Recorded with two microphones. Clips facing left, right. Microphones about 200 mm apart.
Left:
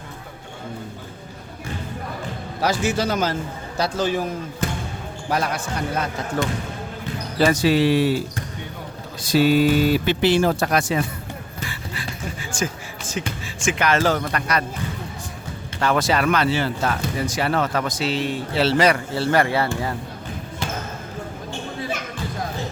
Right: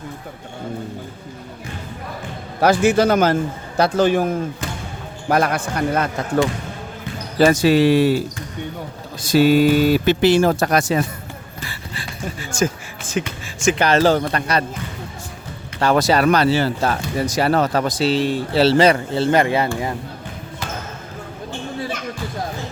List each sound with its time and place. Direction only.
2.6 s speech: 55° right (ahead or behind)
5.3 s speech: 55° right (ahead or behind)
7.3 s speech: 45° right (ahead or behind)
9.2 s speech: 45° right (ahead or behind)
12.5 s speech: 45° right (ahead or behind)
13.2 s speech: 65° right (ahead or behind)
13.6 s speech: 35° right (ahead or behind)
15.8 s speech: 40° right (ahead or behind); by 19.9 s 20° right (ahead or behind)